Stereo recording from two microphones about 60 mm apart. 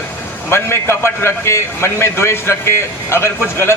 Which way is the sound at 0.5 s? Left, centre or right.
Left.